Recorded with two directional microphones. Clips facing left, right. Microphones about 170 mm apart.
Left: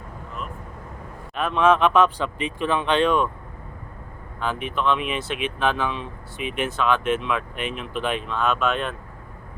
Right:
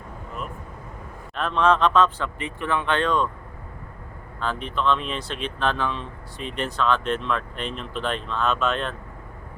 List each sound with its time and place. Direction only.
1.4 s speech: 10° left (ahead or behind)
4.4 s speech: 10° left (ahead or behind)